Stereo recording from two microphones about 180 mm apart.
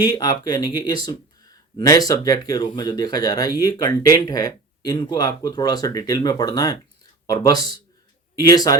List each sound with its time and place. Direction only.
0.0 s speech: 25° left (ahead or behind)